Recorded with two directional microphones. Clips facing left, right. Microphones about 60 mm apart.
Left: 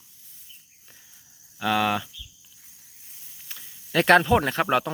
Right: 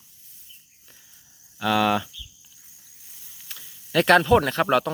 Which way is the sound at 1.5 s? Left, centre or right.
Centre.